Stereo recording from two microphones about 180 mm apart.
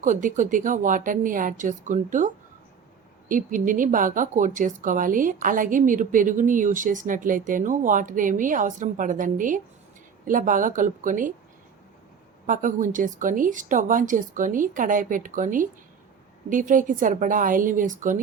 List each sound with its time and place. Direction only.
0.0 s speech: 45° right (ahead or behind)
12.5 s speech: 45° right (ahead or behind)